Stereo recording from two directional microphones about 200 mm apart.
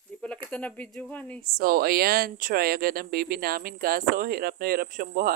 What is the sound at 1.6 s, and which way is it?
Speech, 50° right (ahead or behind).